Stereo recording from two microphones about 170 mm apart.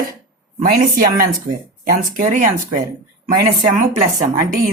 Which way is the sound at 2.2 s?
50° right (ahead or behind).